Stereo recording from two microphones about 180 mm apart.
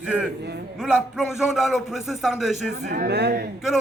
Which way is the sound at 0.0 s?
5° right (ahead or behind).